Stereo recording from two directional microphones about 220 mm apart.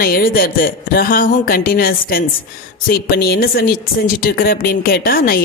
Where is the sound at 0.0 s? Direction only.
45° left (ahead or behind).